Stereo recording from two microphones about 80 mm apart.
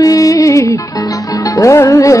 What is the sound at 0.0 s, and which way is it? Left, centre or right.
Music, left.